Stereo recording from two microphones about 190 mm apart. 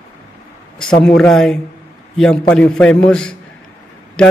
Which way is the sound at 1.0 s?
5° left (ahead or behind).